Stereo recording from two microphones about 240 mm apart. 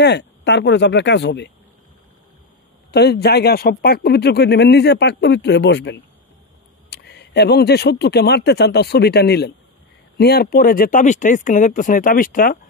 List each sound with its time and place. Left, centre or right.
0.0 s a man's voice: left
2.9 s a man's voice: left